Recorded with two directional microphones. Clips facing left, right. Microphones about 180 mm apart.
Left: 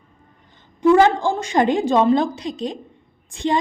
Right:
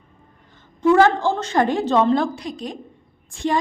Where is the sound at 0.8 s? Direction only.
15° left (ahead or behind).